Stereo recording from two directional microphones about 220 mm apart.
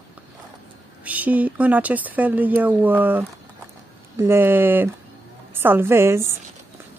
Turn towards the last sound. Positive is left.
turn(degrees=-10)  # may be behind; listen again after turning